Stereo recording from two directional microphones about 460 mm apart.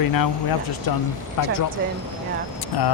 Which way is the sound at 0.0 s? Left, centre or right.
Left.